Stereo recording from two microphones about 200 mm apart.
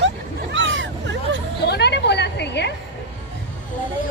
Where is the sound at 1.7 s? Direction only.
55° left (ahead or behind).